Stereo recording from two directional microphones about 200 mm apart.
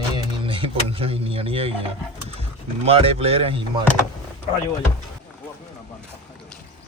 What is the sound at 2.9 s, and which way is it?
Speech, 30° right (ahead or behind).